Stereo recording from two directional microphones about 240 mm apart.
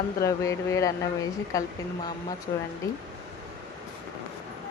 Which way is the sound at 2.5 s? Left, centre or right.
Left.